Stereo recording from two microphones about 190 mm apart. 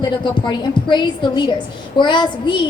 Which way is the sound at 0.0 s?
25° left (ahead or behind).